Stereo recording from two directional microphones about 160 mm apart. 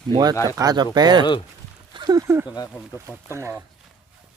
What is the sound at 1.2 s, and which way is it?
Speech, 30° left (ahead or behind).